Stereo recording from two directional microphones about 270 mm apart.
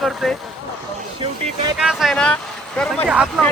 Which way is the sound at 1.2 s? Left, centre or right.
Centre.